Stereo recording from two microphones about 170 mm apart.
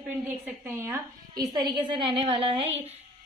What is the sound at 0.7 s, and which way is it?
A woman's voice, 15° right (ahead or behind).